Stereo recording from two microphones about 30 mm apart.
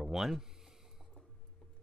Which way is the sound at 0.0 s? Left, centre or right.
Centre.